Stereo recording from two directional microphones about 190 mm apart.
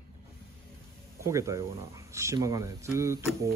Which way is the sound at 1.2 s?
15° right (ahead or behind).